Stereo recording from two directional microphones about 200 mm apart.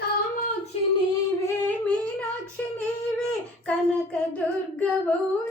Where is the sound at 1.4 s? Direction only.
10° left (ahead or behind).